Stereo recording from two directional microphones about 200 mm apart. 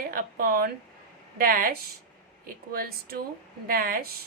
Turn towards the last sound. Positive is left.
turn(degrees=-45)  # may be behind; listen again after turning